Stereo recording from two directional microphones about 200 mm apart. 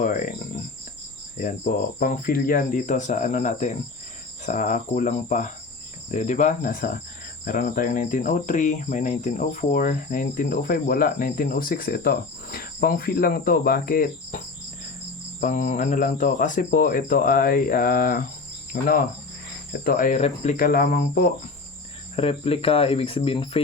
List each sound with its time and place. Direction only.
0.0 s speech: 40° left (ahead or behind)
22.1 s speech: 30° left (ahead or behind)